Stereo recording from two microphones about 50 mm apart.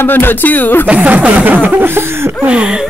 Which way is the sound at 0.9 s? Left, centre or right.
Right.